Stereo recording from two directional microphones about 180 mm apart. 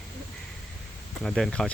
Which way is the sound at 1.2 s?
Centre (ahead or behind).